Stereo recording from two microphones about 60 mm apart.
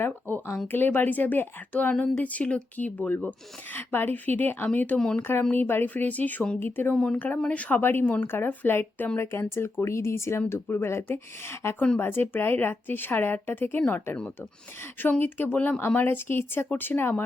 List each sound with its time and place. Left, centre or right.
0.7 s a woman's voice: left
4.9 s speech: centre
5.2 s a woman's voice: left
6.9 s a woman's voice: centre
7.8 s speech: left
8.0 s a woman's voice: left
8.3 s speech: left
15.2 s speech: left